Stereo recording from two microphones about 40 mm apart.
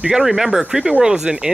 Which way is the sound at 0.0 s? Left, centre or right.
Centre.